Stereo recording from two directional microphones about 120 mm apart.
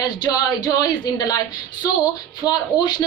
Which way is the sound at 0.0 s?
35° left (ahead or behind).